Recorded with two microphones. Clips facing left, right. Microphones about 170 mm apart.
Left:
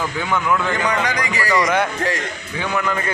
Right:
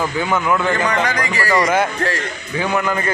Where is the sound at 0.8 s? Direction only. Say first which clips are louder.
Right 2 dB; 10° left (ahead or behind).